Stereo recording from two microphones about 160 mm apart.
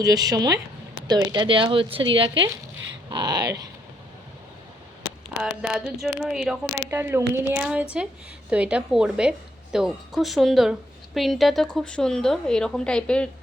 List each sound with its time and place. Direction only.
0.0 s speech: 25° right (ahead or behind)
5.4 s a woman's voice: 5° right (ahead or behind)
6.9 s a woman's voice: 15° right (ahead or behind); by 13.3 s 5° left (ahead or behind)